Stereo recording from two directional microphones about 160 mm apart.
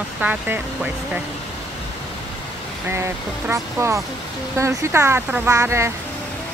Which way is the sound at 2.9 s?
15° right (ahead or behind).